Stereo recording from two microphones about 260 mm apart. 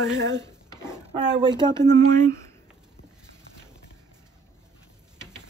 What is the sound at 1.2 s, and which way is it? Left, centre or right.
Speech, centre.